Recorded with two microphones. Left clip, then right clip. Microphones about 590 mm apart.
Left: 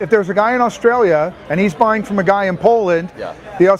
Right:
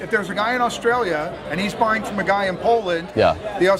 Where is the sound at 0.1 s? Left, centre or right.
Left.